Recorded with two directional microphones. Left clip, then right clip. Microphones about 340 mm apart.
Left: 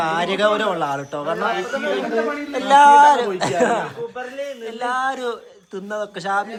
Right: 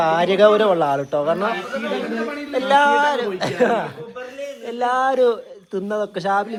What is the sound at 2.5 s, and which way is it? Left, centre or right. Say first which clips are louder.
A man's voice: left 4 dB; centre.